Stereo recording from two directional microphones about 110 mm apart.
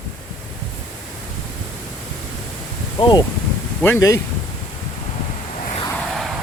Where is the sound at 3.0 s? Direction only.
45° left (ahead or behind).